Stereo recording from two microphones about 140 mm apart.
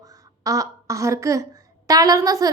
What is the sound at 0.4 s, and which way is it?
A woman's voice, 25° right (ahead or behind).